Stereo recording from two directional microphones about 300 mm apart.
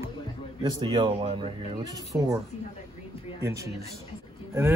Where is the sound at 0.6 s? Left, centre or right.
Centre.